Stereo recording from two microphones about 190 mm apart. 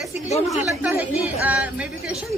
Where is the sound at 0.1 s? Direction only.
35° left (ahead or behind).